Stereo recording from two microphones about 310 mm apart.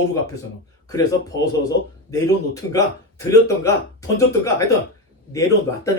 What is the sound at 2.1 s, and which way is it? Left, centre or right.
Speech, centre.